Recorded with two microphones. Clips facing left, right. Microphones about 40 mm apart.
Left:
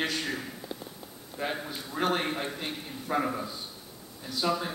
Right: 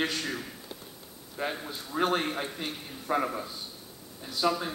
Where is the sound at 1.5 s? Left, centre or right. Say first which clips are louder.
Even; centre.